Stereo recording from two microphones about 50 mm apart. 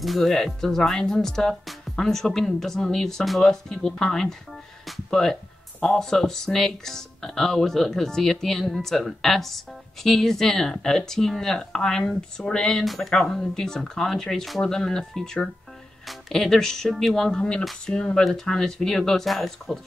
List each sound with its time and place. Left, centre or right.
0.0 s speech: centre
12.8 s speech: centre